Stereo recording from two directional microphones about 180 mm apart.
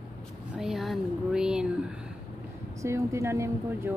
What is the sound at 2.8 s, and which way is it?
Speech, 15° right (ahead or behind).